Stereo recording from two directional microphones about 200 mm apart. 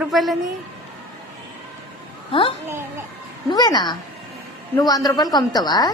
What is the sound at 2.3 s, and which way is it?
A woman's voice, 25° left (ahead or behind).